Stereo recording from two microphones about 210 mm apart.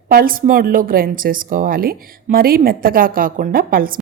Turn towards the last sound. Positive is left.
turn(degrees=-45)  # may be behind; listen again after turning